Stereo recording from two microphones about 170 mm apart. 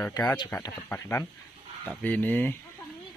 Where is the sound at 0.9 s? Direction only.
10° left (ahead or behind).